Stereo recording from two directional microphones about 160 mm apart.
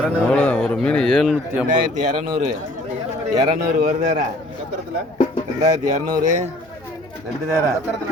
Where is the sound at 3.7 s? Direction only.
55° right (ahead or behind).